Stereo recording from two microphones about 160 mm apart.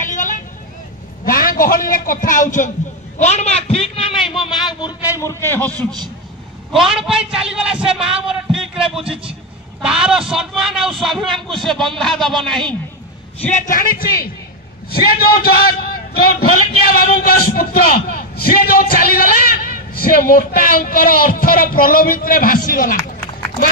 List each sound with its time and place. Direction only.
0.0 s vehicle: 55° left (ahead or behind)
1.2 s a man's voice: 60° left (ahead or behind); by 4.9 s 30° left (ahead or behind)
5.2 s a man's voice: 15° left (ahead or behind)
5.8 s a man's voice: 25° right (ahead or behind)
6.7 s a man's voice: centre (ahead or behind)
13.5 s a man's voice: 50° left (ahead or behind)